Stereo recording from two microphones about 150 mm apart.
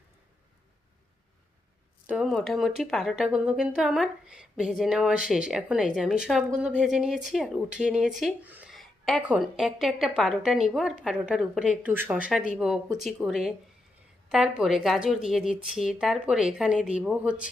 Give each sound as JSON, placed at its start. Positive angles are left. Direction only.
{"t": 2.0, "sound": "speech", "side_deg": -5}
{"t": 8.7, "sound": "a sound", "side_deg": 0}
{"t": 9.2, "sound": "speech", "side_deg": -5}